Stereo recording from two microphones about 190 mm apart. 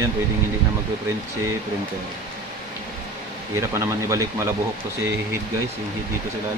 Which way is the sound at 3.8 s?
15° right (ahead or behind).